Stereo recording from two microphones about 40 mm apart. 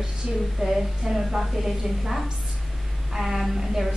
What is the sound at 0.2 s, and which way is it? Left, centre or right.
A woman's voice, centre.